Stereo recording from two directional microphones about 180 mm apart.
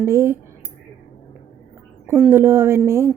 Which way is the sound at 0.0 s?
15° right (ahead or behind).